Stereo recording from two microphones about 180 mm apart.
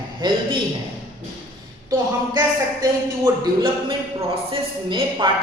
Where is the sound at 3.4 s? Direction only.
30° right (ahead or behind).